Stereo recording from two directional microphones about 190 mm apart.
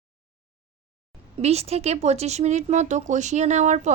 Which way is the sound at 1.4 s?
35° right (ahead or behind).